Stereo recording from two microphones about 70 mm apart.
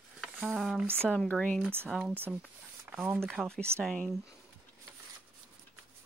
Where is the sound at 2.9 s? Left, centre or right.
Right.